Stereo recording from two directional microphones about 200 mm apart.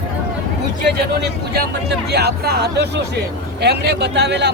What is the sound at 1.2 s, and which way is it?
Speech, 55° right (ahead or behind).